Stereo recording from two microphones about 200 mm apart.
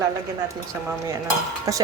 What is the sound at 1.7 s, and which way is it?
Speech, 15° right (ahead or behind).